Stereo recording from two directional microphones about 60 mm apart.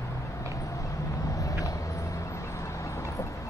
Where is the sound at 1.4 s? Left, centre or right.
Left.